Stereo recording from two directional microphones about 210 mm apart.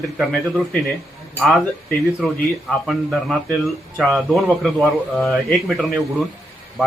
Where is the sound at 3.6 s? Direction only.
Centre (ahead or behind).